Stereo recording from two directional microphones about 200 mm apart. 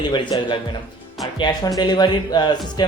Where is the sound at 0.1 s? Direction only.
25° left (ahead or behind).